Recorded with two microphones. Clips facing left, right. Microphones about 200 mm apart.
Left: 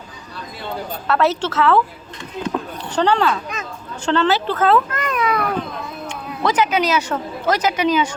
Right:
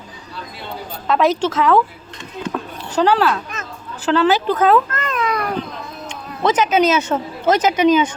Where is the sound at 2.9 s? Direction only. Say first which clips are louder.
Right 2 dB; 5° right (ahead or behind).